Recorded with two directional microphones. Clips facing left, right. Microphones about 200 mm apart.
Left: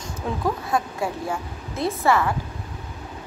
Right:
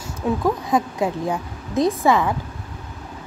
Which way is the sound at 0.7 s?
20° right (ahead or behind).